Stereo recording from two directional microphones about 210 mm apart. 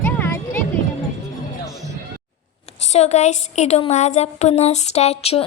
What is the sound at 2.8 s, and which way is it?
A woman's voice, 30° left (ahead or behind).